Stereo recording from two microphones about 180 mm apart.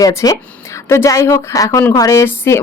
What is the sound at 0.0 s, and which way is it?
A woman's voice, 20° left (ahead or behind).